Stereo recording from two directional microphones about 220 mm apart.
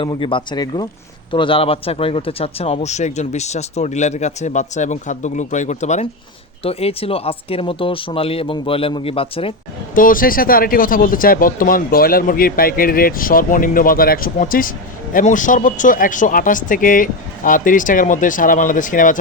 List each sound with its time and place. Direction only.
0.0 s a man's voice: 25° left (ahead or behind)
9.9 s a man's voice: 40° left (ahead or behind)